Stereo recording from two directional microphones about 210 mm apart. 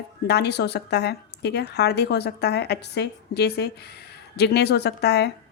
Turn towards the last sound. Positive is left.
turn(degrees=50)  # may be behind; listen again after turning